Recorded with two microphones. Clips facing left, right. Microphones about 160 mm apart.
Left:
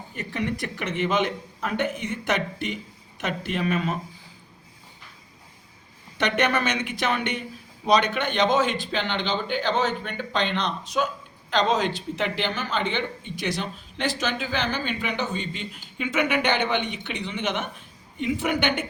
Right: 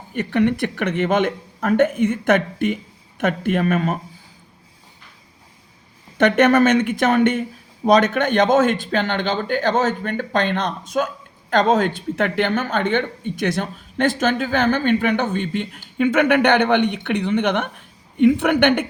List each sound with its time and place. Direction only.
0.1 s a woman's voice: 65° right (ahead or behind)
6.1 s a woman's voice: 50° right (ahead or behind)